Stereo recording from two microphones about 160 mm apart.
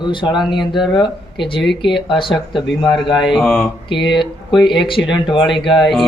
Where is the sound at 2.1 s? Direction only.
30° left (ahead or behind).